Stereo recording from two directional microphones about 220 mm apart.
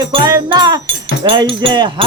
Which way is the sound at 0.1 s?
20° right (ahead or behind).